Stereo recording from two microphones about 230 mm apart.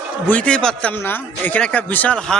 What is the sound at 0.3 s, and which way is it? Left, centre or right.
A man's voice, centre.